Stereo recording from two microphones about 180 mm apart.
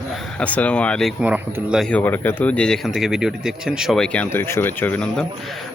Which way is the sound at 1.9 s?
10° left (ahead or behind).